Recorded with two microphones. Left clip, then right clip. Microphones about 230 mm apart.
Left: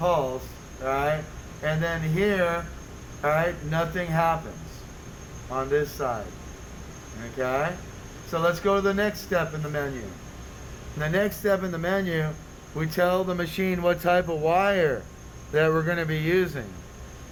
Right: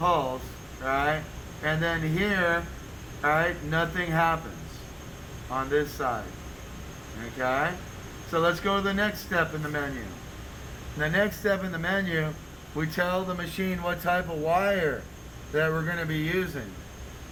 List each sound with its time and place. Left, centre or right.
0.9 s a sound: left
1.6 s speech: left
5.5 s speech: left
7.3 s speech: left
11.0 s speech: left